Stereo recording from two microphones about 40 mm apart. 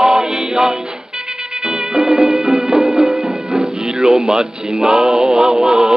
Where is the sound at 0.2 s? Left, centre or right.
Right.